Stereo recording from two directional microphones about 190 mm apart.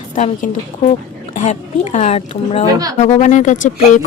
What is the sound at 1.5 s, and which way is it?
Speech, 35° left (ahead or behind).